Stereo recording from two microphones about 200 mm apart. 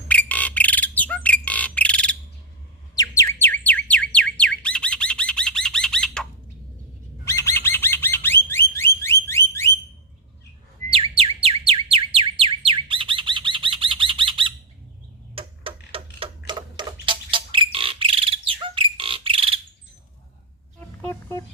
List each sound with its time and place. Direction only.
0.1 s bird: 5° left (ahead or behind)
3.0 s squawk: 15° left (ahead or behind)
7.3 s bird: 15° left (ahead or behind)
10.8 s bird: 25° right (ahead or behind)
11.2 s a sound: 30° right (ahead or behind)
15.4 s tick-tock: 25° right (ahead or behind)
16.5 s bird: 25° right (ahead or behind)
20.7 s a sound: 10° left (ahead or behind)